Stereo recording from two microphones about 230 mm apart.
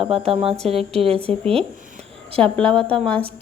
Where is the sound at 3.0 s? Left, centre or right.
Centre.